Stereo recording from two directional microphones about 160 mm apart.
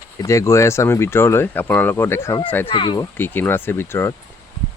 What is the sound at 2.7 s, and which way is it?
Speech, 35° left (ahead or behind).